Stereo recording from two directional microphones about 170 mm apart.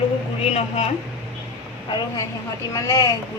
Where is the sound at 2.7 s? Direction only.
20° left (ahead or behind).